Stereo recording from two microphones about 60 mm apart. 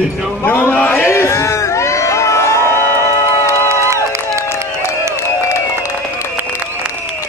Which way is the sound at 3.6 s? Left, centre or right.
Right.